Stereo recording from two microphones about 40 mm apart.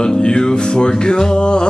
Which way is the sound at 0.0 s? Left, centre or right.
Left.